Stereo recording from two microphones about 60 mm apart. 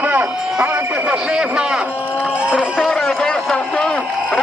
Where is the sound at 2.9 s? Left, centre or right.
Centre.